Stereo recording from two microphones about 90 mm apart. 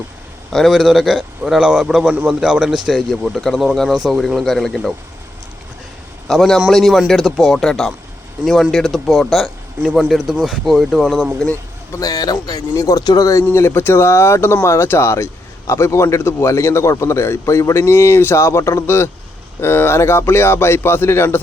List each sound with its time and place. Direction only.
0.5 s speech: centre (ahead or behind)
6.2 s a man's voice: centre (ahead or behind)
11.9 s speech: 45° left (ahead or behind)
13.4 s speech: 25° left (ahead or behind)